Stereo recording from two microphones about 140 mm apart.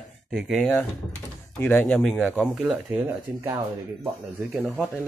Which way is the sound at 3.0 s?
30° right (ahead or behind).